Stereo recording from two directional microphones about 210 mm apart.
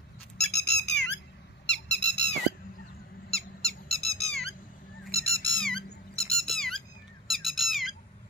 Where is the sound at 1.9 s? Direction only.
55° left (ahead or behind).